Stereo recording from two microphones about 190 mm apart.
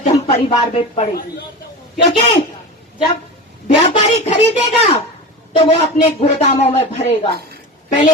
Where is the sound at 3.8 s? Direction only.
35° left (ahead or behind).